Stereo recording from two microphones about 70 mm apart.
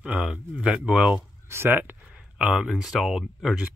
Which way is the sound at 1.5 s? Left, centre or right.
Right.